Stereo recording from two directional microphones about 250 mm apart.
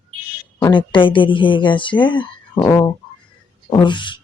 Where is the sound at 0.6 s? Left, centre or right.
Centre.